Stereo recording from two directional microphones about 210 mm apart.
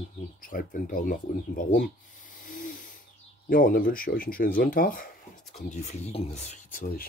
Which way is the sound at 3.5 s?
45° left (ahead or behind).